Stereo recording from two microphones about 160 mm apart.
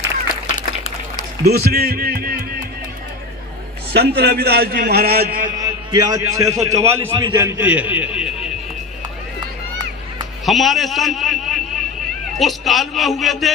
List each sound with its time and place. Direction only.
1.5 s speech: 75° right (ahead or behind)
3.9 s a man's voice: 90° right; by 5.5 s 70° right (ahead or behind)
5.5 s a man's voice: 25° right (ahead or behind); by 8.5 s 5° right (ahead or behind)
10.4 s a man's voice: centre (ahead or behind)